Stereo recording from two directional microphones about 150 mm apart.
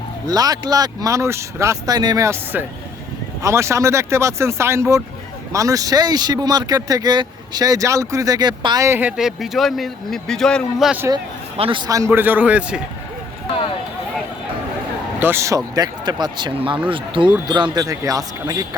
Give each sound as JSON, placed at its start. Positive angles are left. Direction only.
{"t": 0.3, "sound": "speech", "side_deg": -25}
{"t": 11.5, "sound": "a man's voice", "side_deg": -35}
{"t": 15.2, "sound": "speech", "side_deg": -15}